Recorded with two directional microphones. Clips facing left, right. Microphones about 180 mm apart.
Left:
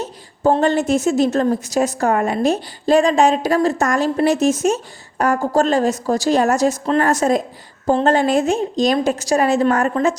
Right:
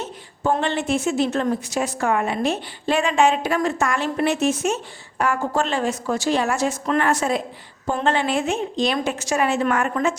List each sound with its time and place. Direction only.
0.0 s a woman's voice: 40° left (ahead or behind)